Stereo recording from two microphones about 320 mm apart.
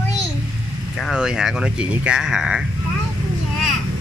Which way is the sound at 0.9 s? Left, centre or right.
Centre.